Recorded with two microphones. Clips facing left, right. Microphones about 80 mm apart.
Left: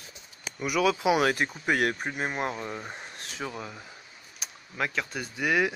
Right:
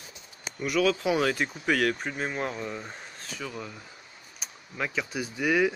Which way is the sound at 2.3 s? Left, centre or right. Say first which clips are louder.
Left 1 dB; left.